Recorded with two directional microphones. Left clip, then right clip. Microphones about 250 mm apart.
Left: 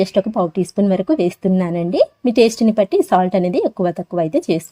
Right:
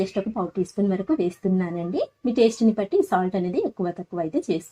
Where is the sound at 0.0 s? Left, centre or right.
Left.